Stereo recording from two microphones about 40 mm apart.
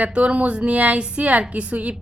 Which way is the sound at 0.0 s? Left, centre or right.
Right.